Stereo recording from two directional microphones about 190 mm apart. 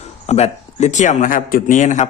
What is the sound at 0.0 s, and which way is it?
Speech, 35° left (ahead or behind).